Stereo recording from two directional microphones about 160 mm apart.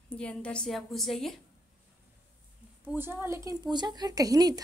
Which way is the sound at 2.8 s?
15° right (ahead or behind).